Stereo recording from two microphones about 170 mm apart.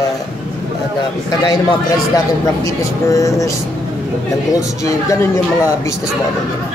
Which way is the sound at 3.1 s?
20° left (ahead or behind).